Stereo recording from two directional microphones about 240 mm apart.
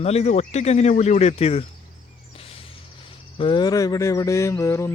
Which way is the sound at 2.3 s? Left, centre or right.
Left.